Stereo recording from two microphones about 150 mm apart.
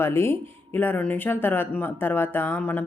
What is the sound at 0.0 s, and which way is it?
Speech, 15° left (ahead or behind).